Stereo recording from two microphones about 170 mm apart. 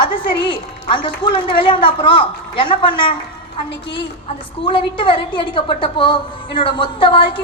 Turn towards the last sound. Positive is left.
turn(degrees=30)  # may be behind; listen again after turning